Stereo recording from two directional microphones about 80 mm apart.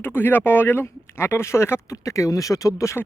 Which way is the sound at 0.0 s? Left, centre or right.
Left.